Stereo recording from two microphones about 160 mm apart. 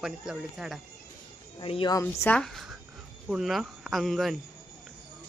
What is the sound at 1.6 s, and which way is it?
Speech, 30° left (ahead or behind).